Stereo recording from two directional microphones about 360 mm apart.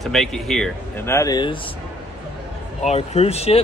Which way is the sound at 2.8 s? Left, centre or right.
Centre.